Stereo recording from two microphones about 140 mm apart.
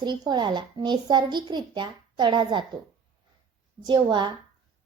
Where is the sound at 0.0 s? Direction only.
30° right (ahead or behind).